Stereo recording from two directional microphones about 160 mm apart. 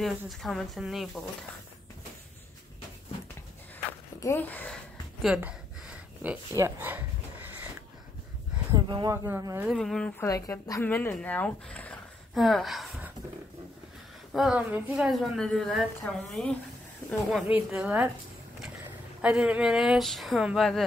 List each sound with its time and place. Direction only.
0.0 s a woman's voice: centre (ahead or behind)
4.2 s speech: 15° left (ahead or behind)
5.2 s a sound: 5° right (ahead or behind)
8.7 s a woman's voice: 25° right (ahead or behind)
9.8 s a woman's voice: 5° left (ahead or behind)
10.2 s speech: 20° left (ahead or behind); by 13.1 s centre (ahead or behind)
14.3 s a woman's voice: 5° right (ahead or behind)
19.2 s a woman's voice: 5° right (ahead or behind)